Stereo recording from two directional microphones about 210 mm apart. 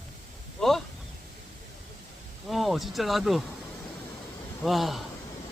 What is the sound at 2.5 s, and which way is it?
Speech, centre (ahead or behind).